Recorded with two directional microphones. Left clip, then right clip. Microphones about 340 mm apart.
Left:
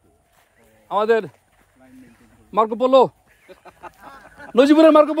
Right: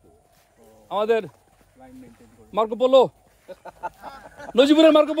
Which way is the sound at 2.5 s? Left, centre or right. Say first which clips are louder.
Left 2 dB; left.